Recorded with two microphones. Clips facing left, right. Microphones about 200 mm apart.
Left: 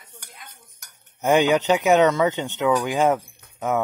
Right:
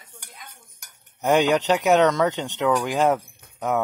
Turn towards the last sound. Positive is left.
turn(degrees=0)  # may be behind; listen again after turning